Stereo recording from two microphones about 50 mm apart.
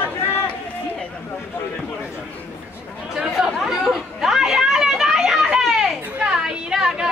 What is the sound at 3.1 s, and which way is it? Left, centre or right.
Chatter, centre.